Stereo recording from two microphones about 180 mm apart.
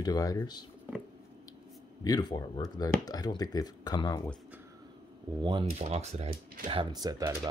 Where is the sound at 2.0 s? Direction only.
25° left (ahead or behind).